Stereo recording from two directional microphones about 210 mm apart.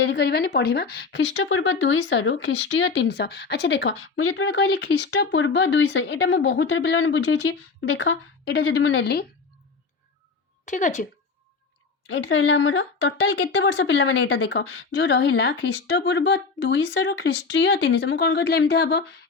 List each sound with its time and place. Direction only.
0.0 s speech: 55° left (ahead or behind)
5.1 s speech: 65° left (ahead or behind)
10.7 s speech: 35° left (ahead or behind)
12.0 s speech: 60° left (ahead or behind)